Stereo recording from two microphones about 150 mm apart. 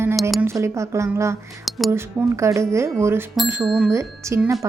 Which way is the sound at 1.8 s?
20° right (ahead or behind).